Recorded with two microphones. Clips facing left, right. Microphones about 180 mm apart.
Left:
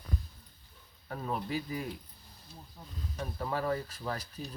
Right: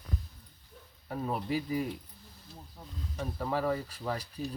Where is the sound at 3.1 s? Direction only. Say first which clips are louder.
Right 2 dB; 10° right (ahead or behind).